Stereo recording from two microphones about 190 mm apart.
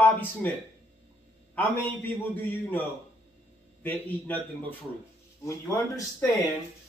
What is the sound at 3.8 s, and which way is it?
Speech, 10° left (ahead or behind).